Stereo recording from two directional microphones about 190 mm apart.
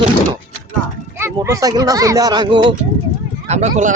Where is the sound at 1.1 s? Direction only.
10° right (ahead or behind).